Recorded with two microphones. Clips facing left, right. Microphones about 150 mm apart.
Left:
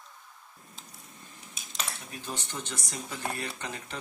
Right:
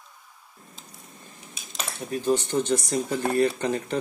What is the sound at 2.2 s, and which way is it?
Speech, 40° right (ahead or behind).